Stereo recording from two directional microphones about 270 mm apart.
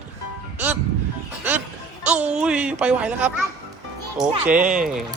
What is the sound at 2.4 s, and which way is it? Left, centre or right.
Speech, centre.